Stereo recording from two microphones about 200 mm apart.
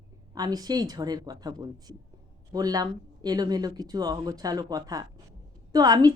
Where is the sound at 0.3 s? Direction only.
20° right (ahead or behind).